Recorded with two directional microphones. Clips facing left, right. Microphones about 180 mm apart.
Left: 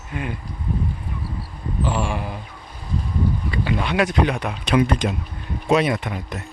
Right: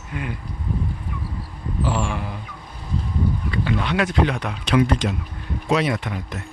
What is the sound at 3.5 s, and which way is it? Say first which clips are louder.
Speech: even; 10° left (ahead or behind).